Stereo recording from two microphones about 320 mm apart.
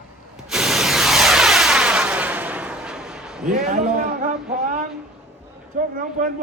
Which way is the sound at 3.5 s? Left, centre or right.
Right.